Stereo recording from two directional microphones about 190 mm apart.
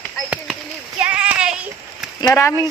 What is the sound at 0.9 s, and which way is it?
Child singing, 5° right (ahead or behind).